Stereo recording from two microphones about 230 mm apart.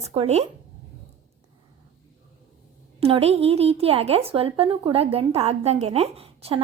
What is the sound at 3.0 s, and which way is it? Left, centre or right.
Speech, right.